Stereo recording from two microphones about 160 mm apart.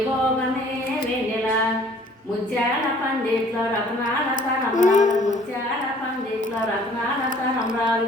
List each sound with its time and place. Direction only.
4.7 s a woman's voice: 50° left (ahead or behind)